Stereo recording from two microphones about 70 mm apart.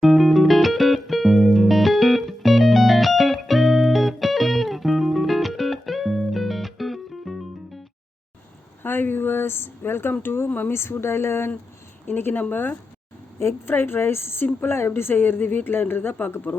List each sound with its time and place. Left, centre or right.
0.0 s music: centre
8.8 s a sound: left
12.0 s a woman's voice: left